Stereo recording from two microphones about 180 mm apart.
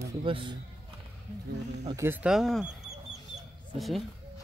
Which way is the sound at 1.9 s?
15° right (ahead or behind).